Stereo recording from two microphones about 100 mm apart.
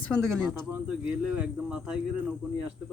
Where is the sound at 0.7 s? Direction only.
10° right (ahead or behind).